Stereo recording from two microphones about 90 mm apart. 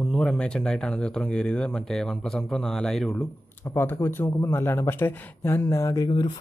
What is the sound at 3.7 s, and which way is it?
Speech, 30° left (ahead or behind).